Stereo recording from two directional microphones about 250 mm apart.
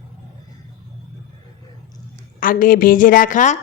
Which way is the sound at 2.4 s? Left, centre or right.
Left.